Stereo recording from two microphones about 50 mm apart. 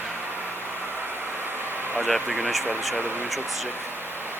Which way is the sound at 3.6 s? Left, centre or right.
Right.